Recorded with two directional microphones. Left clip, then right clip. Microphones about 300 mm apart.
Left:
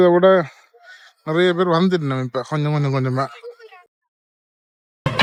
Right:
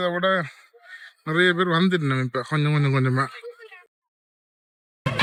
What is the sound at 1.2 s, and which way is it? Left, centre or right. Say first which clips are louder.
A man's voice: left 3 dB; centre.